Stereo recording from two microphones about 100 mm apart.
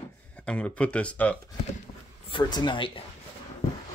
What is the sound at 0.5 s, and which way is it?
Speech, 10° left (ahead or behind).